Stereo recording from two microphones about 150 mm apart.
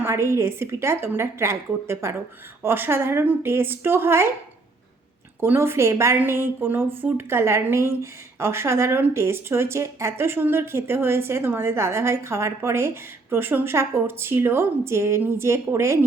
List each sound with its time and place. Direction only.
0.0 s speech: 15° right (ahead or behind)
5.4 s speech: 15° right (ahead or behind)